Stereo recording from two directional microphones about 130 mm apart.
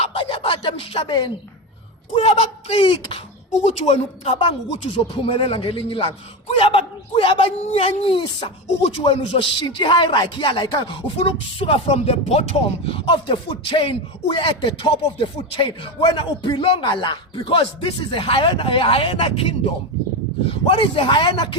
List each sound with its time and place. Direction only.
0.0 s a sound: 45° left (ahead or behind)
1.0 s speech: 35° left (ahead or behind)
2.1 s speech: 55° left (ahead or behind)
3.7 s speech: 55° left (ahead or behind)
12.9 s speech: 40° left (ahead or behind)
20.7 s speech: 40° left (ahead or behind)